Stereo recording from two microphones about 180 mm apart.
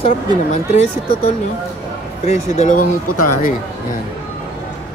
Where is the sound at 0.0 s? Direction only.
40° left (ahead or behind).